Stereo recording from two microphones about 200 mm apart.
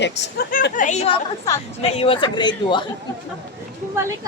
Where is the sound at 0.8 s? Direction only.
35° left (ahead or behind).